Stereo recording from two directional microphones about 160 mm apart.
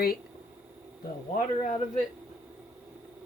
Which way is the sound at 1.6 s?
40° left (ahead or behind).